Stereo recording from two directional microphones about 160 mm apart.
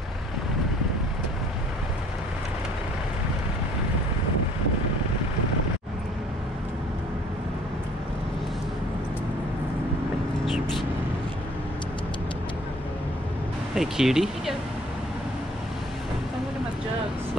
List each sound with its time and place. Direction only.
13.7 s speech: 5° right (ahead or behind)